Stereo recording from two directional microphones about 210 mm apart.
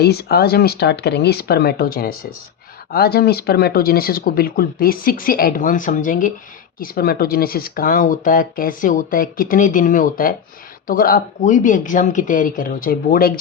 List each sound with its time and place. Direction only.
0.0 s speech: 50° left (ahead or behind)